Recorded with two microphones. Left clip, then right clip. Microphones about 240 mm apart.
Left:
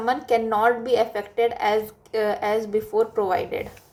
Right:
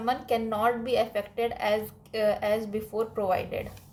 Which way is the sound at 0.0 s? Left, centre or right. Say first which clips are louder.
Left 6 dB; centre.